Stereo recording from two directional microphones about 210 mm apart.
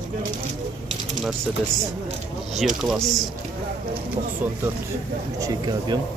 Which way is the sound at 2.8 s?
Centre (ahead or behind).